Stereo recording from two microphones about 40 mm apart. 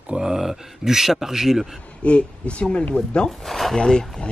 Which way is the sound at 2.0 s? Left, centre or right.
Left.